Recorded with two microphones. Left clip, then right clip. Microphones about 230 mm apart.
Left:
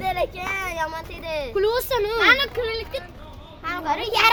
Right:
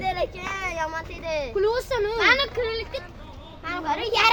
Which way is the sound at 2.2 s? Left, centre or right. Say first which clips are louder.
Left 2 dB; centre.